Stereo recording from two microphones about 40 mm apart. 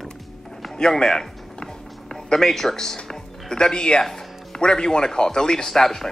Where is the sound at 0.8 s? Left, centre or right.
Centre.